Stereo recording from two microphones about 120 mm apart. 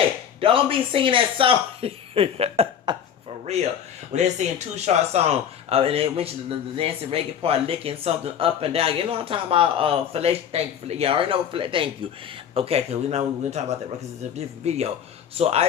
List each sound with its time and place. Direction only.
0.3 s speech: 50° right (ahead or behind)
2.9 s speech: 40° right (ahead or behind)
3.4 s speech: 65° right (ahead or behind); by 11.9 s 45° right (ahead or behind)
12.5 s speech: 55° right (ahead or behind)